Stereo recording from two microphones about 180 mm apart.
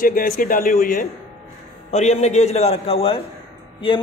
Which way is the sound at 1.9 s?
35° left (ahead or behind).